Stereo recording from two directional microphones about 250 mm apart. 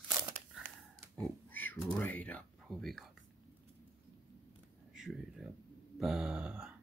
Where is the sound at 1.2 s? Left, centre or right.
Centre.